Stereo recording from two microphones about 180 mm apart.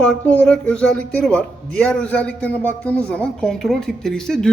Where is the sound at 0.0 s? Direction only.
5° left (ahead or behind).